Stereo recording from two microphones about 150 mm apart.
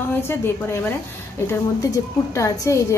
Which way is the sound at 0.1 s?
15° left (ahead or behind).